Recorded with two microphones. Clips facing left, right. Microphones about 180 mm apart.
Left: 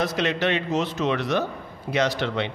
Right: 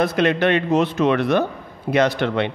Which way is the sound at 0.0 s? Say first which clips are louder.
Right 6 dB; 55° right (ahead or behind).